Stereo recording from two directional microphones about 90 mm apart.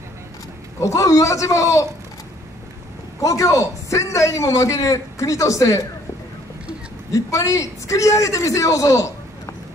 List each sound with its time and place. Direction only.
0.7 s a man's voice: 35° left (ahead or behind)
3.2 s a man's voice: 35° left (ahead or behind)
7.1 s a man's voice: 35° left (ahead or behind)